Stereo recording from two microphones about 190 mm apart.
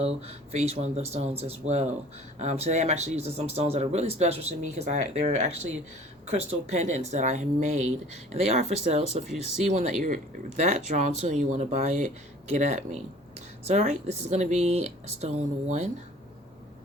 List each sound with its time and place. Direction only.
0.0 s speech: 35° right (ahead or behind)